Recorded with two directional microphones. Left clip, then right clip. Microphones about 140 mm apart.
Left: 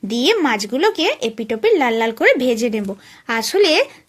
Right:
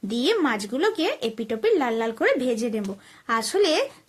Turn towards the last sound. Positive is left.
turn(degrees=20)  # may be behind; listen again after turning